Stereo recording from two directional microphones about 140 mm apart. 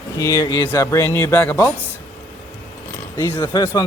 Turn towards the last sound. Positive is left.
turn(degrees=25)  # may be behind; listen again after turning